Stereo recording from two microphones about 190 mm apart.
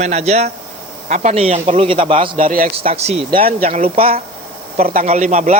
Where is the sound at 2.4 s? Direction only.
45° right (ahead or behind).